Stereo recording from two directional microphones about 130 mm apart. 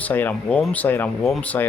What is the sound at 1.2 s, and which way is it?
Speech, centre (ahead or behind).